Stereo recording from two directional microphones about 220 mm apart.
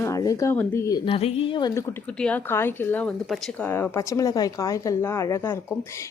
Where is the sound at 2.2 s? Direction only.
5° left (ahead or behind).